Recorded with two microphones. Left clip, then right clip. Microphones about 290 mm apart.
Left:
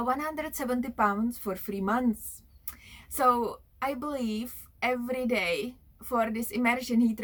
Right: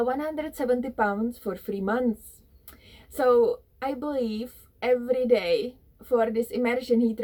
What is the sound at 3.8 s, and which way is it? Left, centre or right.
Speech, centre.